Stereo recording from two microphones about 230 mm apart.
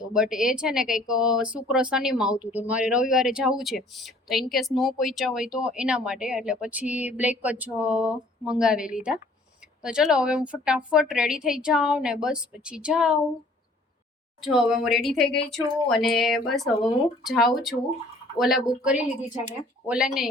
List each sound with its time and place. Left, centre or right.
0.0 s speech: centre
14.4 s speech: centre